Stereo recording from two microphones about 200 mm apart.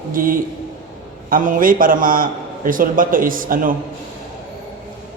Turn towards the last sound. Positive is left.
turn(degrees=-45)  # may be behind; listen again after turning